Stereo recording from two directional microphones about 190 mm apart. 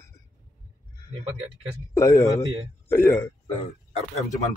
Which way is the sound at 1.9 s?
15° left (ahead or behind).